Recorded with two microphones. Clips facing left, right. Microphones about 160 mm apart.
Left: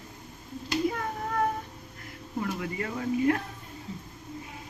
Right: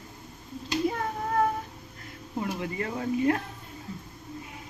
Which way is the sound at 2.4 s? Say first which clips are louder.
Right 1 dB; 30° right (ahead or behind).